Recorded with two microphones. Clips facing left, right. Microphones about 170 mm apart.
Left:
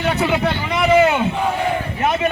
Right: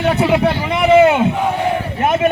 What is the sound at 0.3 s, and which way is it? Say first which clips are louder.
Speech: right 4 dB; 10° right (ahead or behind).